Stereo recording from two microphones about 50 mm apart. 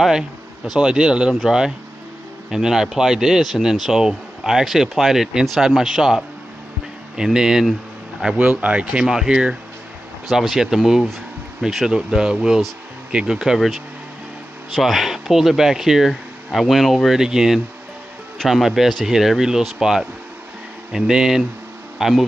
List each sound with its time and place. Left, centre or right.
0.7 s speech: centre
2.5 s speech: centre
8.4 s speech: right
9.0 s speech: centre
14.8 s speech: centre
21.9 s bee: centre